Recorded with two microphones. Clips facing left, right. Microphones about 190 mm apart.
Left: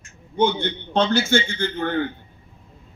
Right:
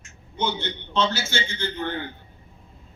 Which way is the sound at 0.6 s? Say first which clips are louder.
Left 3 dB; 55° left (ahead or behind).